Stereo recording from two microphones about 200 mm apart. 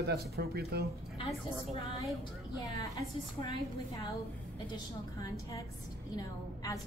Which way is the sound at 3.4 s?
15° left (ahead or behind).